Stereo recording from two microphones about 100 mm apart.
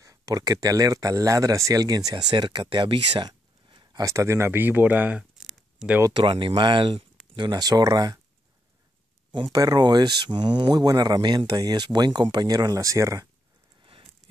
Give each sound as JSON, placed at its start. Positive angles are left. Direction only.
{"t": 0.0, "sound": "speech", "side_deg": -35}
{"t": 4.0, "sound": "speech", "side_deg": -30}
{"t": 5.3, "sound": "a sound", "side_deg": -5}
{"t": 6.1, "sound": "speech", "side_deg": -55}
{"t": 9.3, "sound": "speech", "side_deg": -45}